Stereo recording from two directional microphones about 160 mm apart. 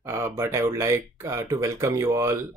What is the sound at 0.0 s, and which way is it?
Speech, 15° right (ahead or behind).